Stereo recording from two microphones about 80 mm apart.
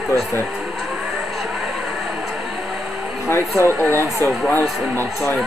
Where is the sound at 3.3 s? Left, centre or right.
Left.